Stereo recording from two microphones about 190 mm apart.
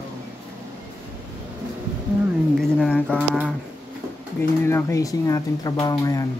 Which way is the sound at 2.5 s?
Centre (ahead or behind).